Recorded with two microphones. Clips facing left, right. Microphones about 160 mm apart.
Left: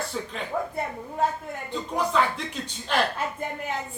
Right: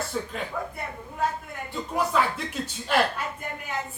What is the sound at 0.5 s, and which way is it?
Speech, 35° left (ahead or behind).